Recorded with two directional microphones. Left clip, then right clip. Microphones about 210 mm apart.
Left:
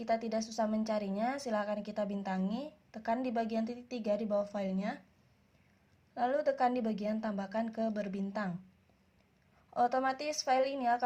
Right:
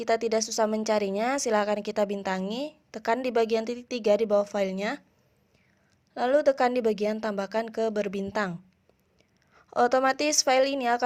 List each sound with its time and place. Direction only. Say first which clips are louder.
0.0 s a woman's voice: right 9 dB; 35° right (ahead or behind)
6.1 s a woman's voice: right 9 dB; 35° right (ahead or behind)
9.6 s a woman's voice: right 8 dB; 40° right (ahead or behind)